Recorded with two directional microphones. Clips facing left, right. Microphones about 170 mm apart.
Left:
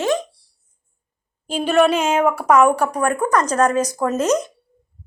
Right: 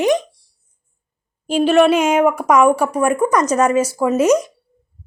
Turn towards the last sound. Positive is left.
turn(degrees=-10)  # may be behind; listen again after turning